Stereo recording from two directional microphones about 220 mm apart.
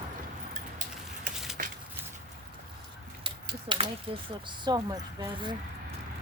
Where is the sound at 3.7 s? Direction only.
25° right (ahead or behind).